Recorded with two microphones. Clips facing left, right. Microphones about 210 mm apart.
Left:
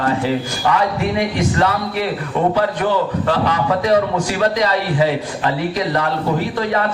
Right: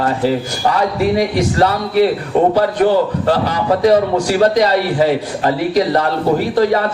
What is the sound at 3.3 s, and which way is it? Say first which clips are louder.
A man's voice: right 1 dB; 35° right (ahead or behind).